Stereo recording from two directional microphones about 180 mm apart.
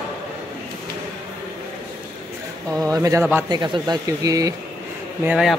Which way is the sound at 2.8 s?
20° right (ahead or behind).